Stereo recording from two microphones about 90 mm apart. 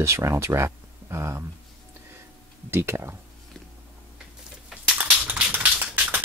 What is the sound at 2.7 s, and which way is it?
Speech, 30° right (ahead or behind).